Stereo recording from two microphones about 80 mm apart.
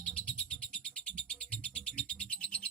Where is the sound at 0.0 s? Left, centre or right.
Centre.